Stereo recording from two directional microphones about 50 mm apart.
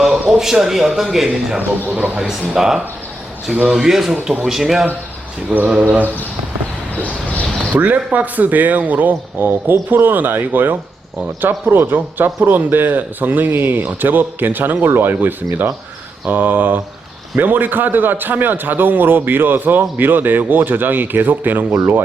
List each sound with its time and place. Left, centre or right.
0.0 s speech: centre
1.9 s speech: right
2.6 s speech: centre
5.5 s speech: right
7.0 s a sound: left
7.6 s speech: right